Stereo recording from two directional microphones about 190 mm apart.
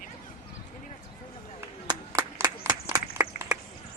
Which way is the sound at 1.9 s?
20° right (ahead or behind).